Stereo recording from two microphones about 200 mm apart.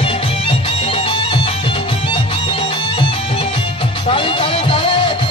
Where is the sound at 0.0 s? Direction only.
30° left (ahead or behind).